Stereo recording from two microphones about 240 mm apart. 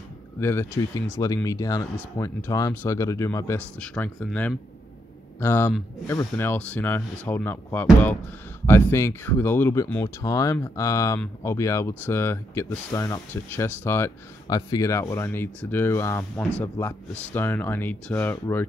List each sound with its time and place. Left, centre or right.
0.4 s speech: centre